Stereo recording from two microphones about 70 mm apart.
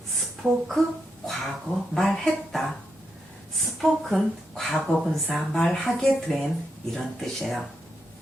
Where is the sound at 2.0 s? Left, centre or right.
Centre.